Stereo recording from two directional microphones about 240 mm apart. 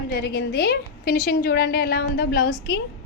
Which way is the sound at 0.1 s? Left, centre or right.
Left.